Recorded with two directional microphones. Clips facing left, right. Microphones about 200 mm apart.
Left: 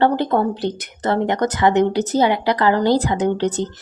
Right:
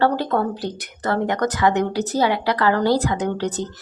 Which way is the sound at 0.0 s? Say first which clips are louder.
Left 3 dB; 20° left (ahead or behind).